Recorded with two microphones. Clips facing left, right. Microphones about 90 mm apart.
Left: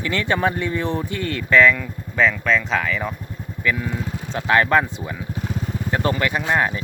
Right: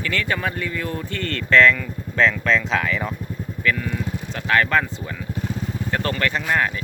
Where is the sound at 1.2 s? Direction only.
10° left (ahead or behind).